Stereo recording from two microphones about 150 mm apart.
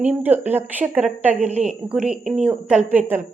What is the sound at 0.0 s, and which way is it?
A woman's voice, 10° right (ahead or behind).